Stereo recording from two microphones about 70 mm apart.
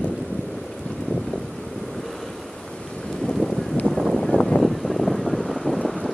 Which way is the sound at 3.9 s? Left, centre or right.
Centre.